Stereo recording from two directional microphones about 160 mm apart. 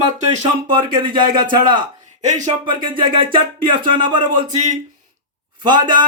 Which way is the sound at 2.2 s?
50° right (ahead or behind).